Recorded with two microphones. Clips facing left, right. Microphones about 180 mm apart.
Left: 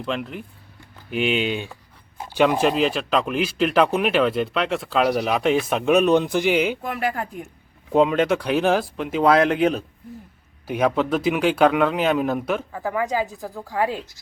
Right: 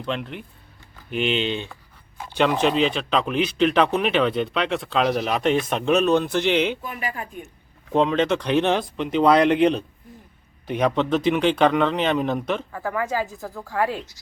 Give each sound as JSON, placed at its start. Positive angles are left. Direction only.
{"t": 0.0, "sound": "speech", "side_deg": 5}
{"t": 6.8, "sound": "speech", "side_deg": 80}
{"t": 7.9, "sound": "speech", "side_deg": 10}